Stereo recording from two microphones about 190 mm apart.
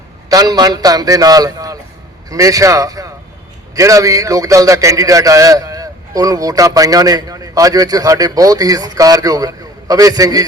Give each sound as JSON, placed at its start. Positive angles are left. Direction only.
{"t": 0.3, "sound": "a man's voice", "side_deg": -20}